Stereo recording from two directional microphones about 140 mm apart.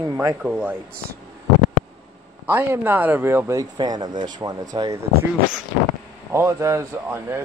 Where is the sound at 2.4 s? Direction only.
15° right (ahead or behind); by 4.6 s 30° right (ahead or behind).